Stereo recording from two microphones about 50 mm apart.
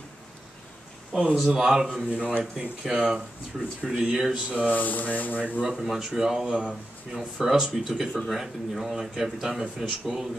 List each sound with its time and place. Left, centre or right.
1.1 s a man's voice: centre
2.1 s speech: right
2.9 s a man's voice: centre
4.6 s speech: left
5.4 s speech: right
5.8 s speech: centre
6.4 s speech: right
7.3 s a man's voice: centre